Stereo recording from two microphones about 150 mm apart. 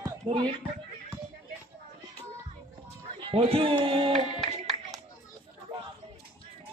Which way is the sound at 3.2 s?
40° right (ahead or behind).